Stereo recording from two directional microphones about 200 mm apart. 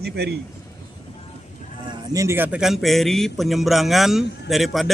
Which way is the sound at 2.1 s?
10° right (ahead or behind).